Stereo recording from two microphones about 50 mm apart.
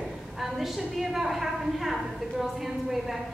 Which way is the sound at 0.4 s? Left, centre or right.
Centre.